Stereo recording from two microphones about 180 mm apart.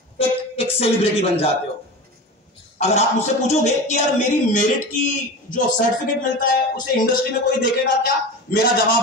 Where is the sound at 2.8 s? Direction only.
40° left (ahead or behind).